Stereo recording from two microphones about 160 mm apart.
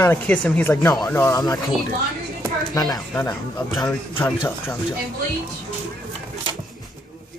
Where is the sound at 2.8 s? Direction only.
25° left (ahead or behind).